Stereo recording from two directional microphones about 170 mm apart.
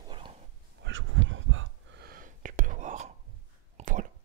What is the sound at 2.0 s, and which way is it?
Gasp, 55° right (ahead or behind).